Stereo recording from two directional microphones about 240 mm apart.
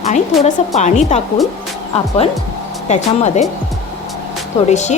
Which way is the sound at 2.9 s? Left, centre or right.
Left.